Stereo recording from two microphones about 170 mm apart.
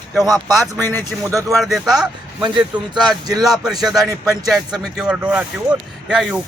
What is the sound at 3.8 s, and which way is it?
Speech, centre (ahead or behind).